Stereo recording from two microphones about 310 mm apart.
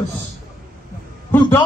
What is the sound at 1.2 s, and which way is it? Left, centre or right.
Speech, centre.